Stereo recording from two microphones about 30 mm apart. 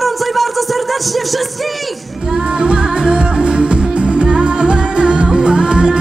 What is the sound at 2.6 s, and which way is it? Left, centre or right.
Music, right.